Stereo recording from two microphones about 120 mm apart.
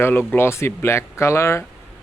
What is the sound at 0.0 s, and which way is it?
Speech, 15° left (ahead or behind).